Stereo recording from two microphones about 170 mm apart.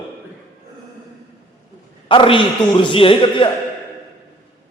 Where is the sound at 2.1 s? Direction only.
30° left (ahead or behind).